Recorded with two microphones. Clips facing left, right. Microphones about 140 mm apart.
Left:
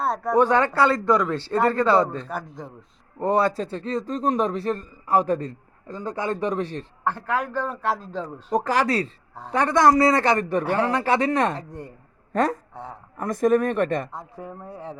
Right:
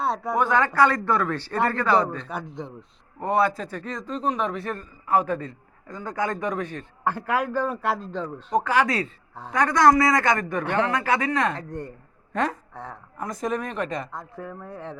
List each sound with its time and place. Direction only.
0.0 s speech: centre (ahead or behind)
0.3 s a man's voice: 30° left (ahead or behind)
7.0 s a man's voice: 10° right (ahead or behind)
8.6 s a man's voice: 40° left (ahead or behind)
11.5 s speech: 5° left (ahead or behind)
12.3 s speech: 45° left (ahead or behind)
13.1 s speech: 55° left (ahead or behind)
14.3 s speech: 20° left (ahead or behind)
14.7 s speech: 10° left (ahead or behind)